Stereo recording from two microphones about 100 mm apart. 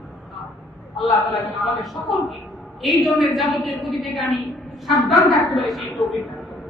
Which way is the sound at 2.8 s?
Centre (ahead or behind).